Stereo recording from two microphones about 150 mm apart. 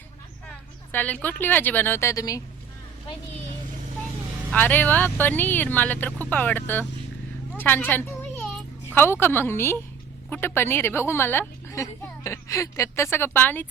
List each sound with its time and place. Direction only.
0.4 s a woman's voice: 10° left (ahead or behind)
4.5 s a woman's voice: 10° left (ahead or behind)
7.6 s a sound: 15° left (ahead or behind)
9.2 s a woman's voice: 15° left (ahead or behind)